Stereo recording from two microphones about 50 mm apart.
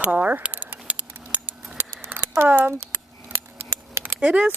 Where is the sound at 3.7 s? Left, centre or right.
Right.